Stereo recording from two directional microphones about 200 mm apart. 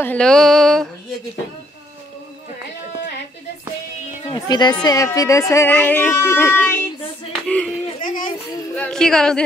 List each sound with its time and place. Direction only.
0.0 s mantra: 5° left (ahead or behind)
4.3 s speech: 20° left (ahead or behind)
7.4 s mantra: 5° left (ahead or behind)
8.0 s child singing: 40° left (ahead or behind)
8.7 s mantra: 5° left (ahead or behind)